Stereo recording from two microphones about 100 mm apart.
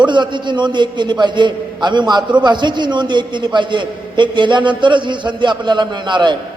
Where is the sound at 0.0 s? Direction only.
50° right (ahead or behind).